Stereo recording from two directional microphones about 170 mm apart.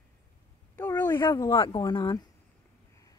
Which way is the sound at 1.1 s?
25° left (ahead or behind).